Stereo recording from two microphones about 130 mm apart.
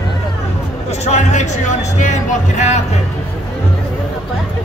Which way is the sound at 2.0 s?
65° left (ahead or behind).